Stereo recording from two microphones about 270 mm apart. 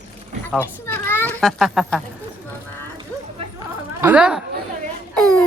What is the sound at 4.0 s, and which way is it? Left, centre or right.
Speech, centre.